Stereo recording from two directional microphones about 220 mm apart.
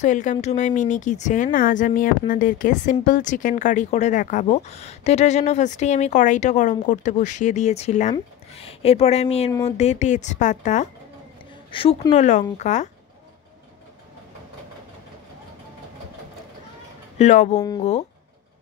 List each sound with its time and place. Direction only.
0.0 s speech: 35° left (ahead or behind)
17.2 s speech: 30° left (ahead or behind)
17.6 s speech: 15° left (ahead or behind)